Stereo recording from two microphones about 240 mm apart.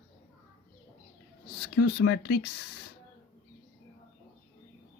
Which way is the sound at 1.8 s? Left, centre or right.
Left.